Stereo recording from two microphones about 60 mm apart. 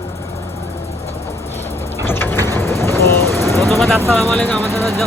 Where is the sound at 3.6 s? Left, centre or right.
Centre.